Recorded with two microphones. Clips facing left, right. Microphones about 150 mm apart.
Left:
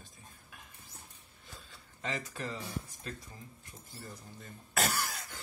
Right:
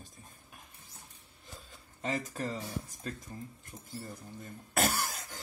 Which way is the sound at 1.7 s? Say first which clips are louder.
Right 4 dB; 40° right (ahead or behind).